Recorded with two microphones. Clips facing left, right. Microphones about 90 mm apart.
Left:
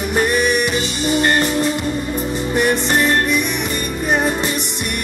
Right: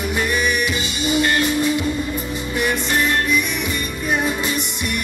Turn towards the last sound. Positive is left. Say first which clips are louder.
# left 3 dB
turn(degrees=60)  # may be behind; listen again after turning